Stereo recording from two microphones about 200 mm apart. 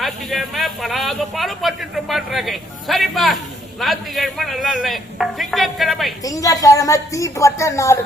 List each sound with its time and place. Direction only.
0.0 s speech: centre (ahead or behind)
6.2 s speech: 15° left (ahead or behind)